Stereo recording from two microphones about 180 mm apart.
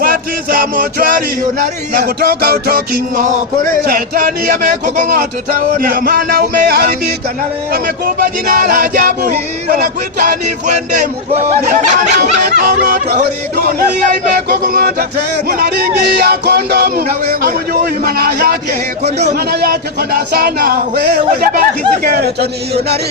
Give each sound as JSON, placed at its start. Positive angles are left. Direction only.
{"t": 0.0, "sound": "music", "side_deg": -50}
{"t": 2.0, "sound": "speech", "side_deg": -60}
{"t": 11.7, "sound": "speech", "side_deg": -45}
{"t": 18.0, "sound": "speech", "side_deg": -60}